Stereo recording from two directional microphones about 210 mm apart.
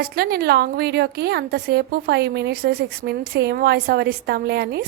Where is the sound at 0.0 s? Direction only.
50° right (ahead or behind).